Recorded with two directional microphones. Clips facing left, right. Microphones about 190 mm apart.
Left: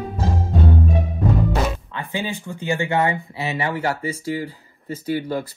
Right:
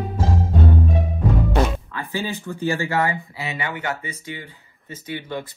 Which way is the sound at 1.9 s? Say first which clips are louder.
Even; 15° left (ahead or behind).